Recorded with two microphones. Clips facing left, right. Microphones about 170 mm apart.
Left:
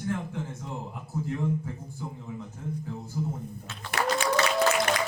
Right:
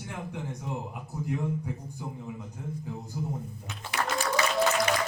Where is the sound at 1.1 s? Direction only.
15° right (ahead or behind).